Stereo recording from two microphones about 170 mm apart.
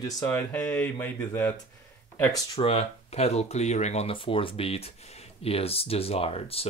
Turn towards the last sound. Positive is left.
turn(degrees=35)  # may be behind; listen again after turning